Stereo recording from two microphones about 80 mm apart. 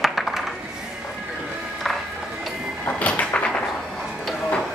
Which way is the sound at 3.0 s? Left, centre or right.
Centre.